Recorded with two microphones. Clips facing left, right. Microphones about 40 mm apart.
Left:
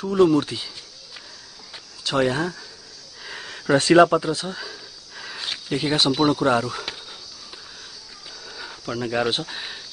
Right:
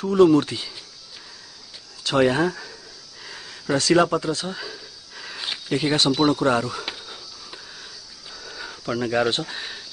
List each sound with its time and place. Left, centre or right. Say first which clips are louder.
0.0 s speech: right 2 dB; centre
2.0 s speech: right 2 dB; centre
2.4 s speech: right 4 dB; right
3.3 s a sound: left 4 dB; left
3.9 s a sound: left 4 dB; centre
8.5 s speech: right 3 dB; centre